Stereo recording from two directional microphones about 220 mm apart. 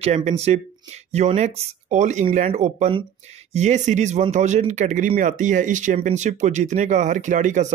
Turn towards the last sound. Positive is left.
turn(degrees=-35)  # may be behind; listen again after turning